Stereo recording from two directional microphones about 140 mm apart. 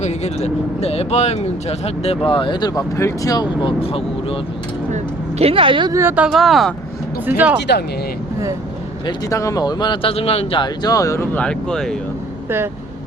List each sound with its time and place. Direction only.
0.0 s speech: 50° left (ahead or behind)
4.9 s a sound: 50° right (ahead or behind)
5.9 s speech: 20° right (ahead or behind)
6.2 s speech: centre (ahead or behind)
7.3 s speech: 10° right (ahead or behind)
9.0 s speech: 25° left (ahead or behind); by 10.7 s 40° left (ahead or behind)
10.8 s speech: 25° left (ahead or behind)
11.3 s speech: 5° left (ahead or behind)